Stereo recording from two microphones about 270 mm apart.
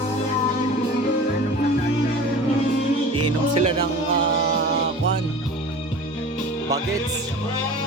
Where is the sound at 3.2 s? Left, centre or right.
Right.